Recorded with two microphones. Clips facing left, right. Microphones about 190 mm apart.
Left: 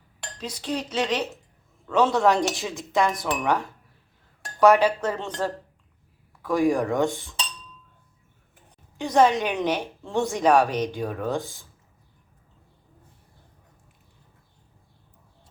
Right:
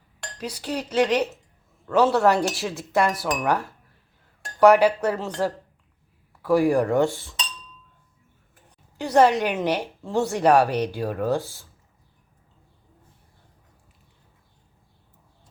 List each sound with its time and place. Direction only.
0.3 s a woman's voice: 10° right (ahead or behind)
9.0 s a woman's voice: 10° right (ahead or behind)